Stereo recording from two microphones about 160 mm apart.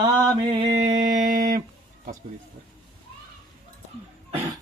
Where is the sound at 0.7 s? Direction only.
55° right (ahead or behind).